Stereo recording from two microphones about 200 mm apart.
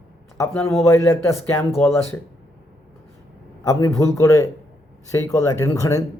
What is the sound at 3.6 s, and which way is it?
A man's voice, 15° left (ahead or behind).